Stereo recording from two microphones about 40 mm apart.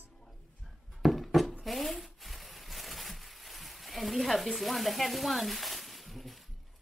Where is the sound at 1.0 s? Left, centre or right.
Centre.